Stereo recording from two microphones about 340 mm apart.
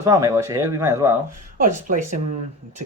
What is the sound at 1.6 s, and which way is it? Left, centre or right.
Speech, right.